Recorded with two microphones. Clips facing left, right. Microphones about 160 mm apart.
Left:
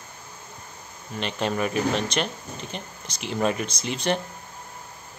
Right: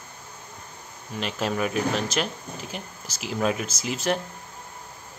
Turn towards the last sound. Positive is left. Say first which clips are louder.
# even
turn(degrees=-5)  # may be behind; listen again after turning